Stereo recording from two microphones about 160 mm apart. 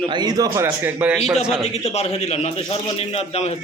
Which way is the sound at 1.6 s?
40° left (ahead or behind).